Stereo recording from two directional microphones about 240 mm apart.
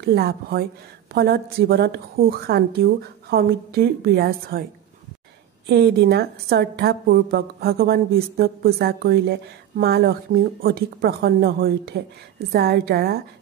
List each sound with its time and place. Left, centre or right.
0.0 s a woman's voice: right
5.7 s a woman's voice: right